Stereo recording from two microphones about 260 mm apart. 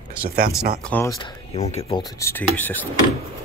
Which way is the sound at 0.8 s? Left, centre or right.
Centre.